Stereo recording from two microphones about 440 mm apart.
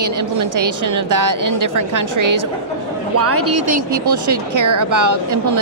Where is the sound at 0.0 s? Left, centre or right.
Right.